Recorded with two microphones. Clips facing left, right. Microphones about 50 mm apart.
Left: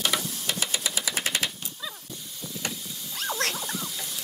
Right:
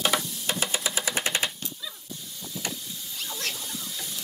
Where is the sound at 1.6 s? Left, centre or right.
Centre.